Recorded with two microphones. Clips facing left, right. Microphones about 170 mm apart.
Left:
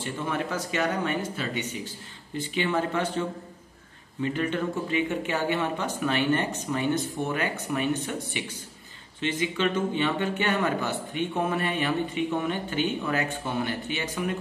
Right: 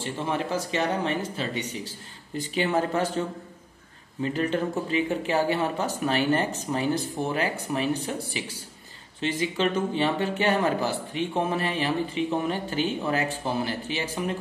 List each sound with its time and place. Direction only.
0.0 s speech: 30° right (ahead or behind)